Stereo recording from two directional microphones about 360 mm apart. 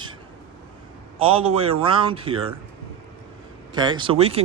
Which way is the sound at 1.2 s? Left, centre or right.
Centre.